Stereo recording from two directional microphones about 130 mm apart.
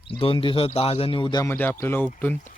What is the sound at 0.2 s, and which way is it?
Speech, 45° left (ahead or behind).